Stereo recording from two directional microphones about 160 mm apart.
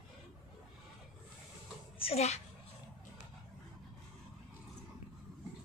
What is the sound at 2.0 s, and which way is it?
Speech, 40° left (ahead or behind).